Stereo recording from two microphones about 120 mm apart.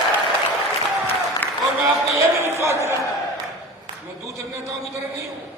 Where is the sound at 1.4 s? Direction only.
15° left (ahead or behind).